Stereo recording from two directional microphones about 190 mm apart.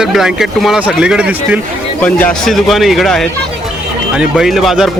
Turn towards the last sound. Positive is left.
turn(degrees=0)  # may be behind; listen again after turning